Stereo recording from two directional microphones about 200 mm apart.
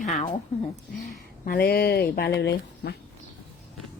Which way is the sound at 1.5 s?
50° left (ahead or behind).